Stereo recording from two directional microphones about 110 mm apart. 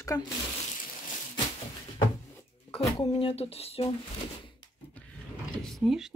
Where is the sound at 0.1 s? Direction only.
30° left (ahead or behind).